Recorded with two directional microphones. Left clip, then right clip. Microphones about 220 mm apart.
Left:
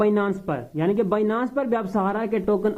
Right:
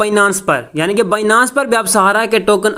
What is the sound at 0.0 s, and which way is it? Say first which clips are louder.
Speech: right 10 dB; 25° right (ahead or behind).